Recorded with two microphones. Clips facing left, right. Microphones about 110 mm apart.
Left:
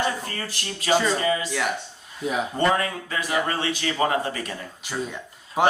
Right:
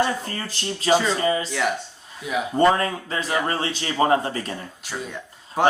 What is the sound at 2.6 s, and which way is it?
Speech, 30° right (ahead or behind).